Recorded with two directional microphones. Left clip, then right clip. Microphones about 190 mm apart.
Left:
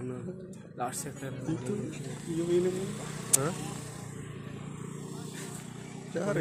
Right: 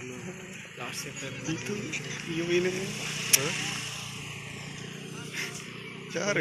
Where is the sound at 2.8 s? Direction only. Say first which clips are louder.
Right 6 dB; 30° left (ahead or behind).